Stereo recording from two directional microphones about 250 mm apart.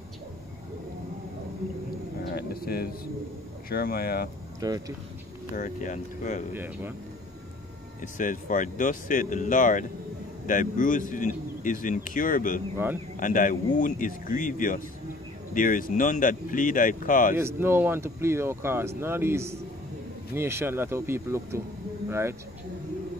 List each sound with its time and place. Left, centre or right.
2.3 s a sound: left
3.6 s speech: left
4.6 s speech: centre
5.6 s speech: left
6.5 s speech: centre
8.0 s speech: left
17.4 s speech: centre